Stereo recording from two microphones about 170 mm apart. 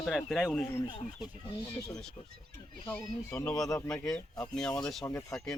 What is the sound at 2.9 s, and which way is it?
Speech, 10° left (ahead or behind).